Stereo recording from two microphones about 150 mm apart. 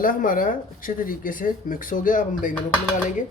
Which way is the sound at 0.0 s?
65° left (ahead or behind).